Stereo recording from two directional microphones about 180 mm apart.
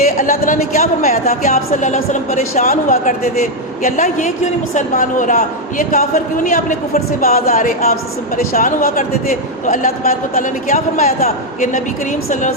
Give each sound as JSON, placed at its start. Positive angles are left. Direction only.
{"t": 0.2, "sound": "a woman's voice", "side_deg": 45}